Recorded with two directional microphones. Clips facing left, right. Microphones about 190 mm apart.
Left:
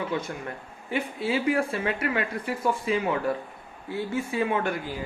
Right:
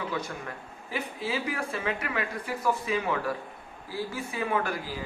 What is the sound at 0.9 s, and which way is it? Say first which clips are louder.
Speech: left 5 dB; 30° left (ahead or behind).